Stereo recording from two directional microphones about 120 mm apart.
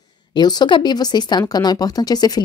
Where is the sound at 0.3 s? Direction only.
35° left (ahead or behind).